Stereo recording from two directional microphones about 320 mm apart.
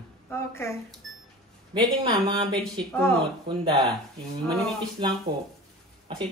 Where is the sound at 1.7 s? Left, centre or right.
Centre.